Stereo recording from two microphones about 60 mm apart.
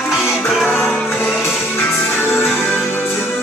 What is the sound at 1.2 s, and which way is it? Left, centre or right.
Music, left.